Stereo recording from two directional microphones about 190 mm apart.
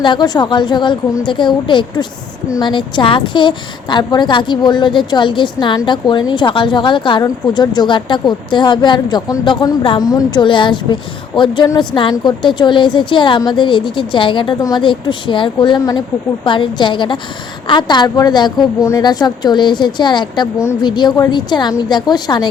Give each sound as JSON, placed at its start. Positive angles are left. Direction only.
{"t": 0.0, "sound": "a woman's voice", "side_deg": 25}